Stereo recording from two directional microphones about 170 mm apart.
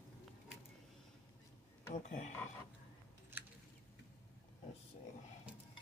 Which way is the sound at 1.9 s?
45° left (ahead or behind).